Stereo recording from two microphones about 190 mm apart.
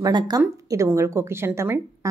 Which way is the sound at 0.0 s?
20° right (ahead or behind).